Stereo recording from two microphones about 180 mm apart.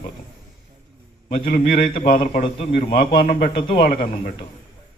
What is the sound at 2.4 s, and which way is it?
A man's voice, 30° left (ahead or behind).